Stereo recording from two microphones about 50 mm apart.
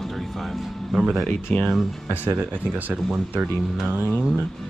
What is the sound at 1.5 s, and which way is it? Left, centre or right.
Speech, centre.